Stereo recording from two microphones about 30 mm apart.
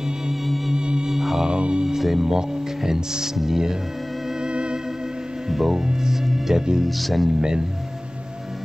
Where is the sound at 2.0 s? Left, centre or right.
Centre.